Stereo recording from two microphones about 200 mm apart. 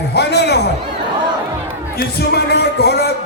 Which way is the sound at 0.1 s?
55° left (ahead or behind).